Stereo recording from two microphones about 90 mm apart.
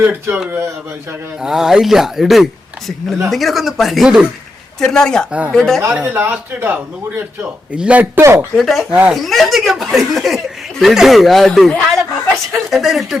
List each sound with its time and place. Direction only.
0.0 s speech: 25° right (ahead or behind)
1.4 s speech: 5° right (ahead or behind)
4.8 s speech: 5° left (ahead or behind)
5.9 s speech: 20° right (ahead or behind)
8.2 s speech: 35° right (ahead or behind)
8.5 s speech: centre (ahead or behind)
8.9 s speech: 15° right (ahead or behind)
9.1 s speech: centre (ahead or behind)